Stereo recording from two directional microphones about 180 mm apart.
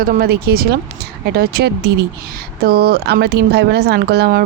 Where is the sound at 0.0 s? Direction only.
55° right (ahead or behind).